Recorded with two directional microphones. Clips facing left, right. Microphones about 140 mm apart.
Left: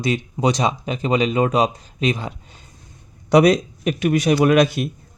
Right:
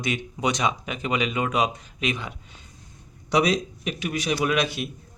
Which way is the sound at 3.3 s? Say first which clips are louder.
Left 8 dB; 55° left (ahead or behind).